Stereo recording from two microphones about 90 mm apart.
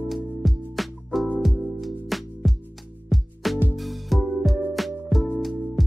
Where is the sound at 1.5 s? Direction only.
20° right (ahead or behind).